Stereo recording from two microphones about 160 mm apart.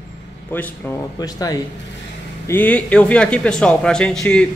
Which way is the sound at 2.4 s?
10° left (ahead or behind).